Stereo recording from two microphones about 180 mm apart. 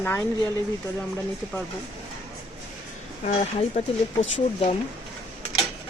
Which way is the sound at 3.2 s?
40° left (ahead or behind).